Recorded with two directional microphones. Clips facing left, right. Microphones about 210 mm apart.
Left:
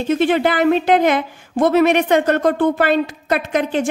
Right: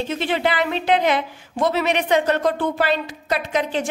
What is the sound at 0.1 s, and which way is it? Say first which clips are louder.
A woman's voice: left 9 dB; 50° left (ahead or behind).